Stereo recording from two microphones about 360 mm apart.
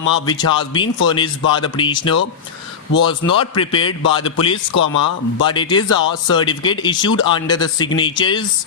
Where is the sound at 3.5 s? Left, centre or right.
Centre.